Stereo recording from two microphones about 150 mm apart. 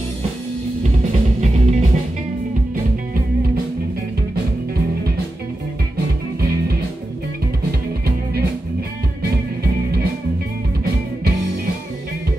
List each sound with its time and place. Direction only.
1.4 s music: 50° right (ahead or behind)